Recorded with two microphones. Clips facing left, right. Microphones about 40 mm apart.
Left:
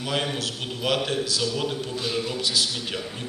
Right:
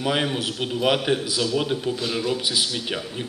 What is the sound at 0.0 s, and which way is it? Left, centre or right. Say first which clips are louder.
A man's voice: right 4 dB; centre.